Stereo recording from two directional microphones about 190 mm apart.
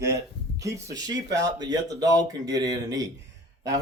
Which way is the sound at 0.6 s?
15° right (ahead or behind).